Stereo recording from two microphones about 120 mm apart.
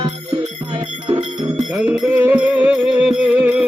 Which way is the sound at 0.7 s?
45° right (ahead or behind).